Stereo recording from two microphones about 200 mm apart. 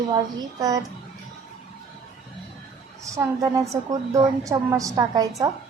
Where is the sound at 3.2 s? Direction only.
15° right (ahead or behind).